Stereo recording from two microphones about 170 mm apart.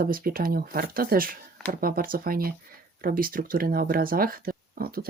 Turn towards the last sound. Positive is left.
turn(degrees=-60)  # may be behind; listen again after turning